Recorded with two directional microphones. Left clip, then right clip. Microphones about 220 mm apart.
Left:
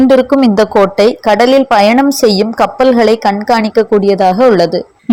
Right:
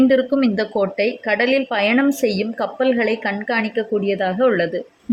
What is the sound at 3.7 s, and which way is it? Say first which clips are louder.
Speech: left 11 dB; 5° left (ahead or behind).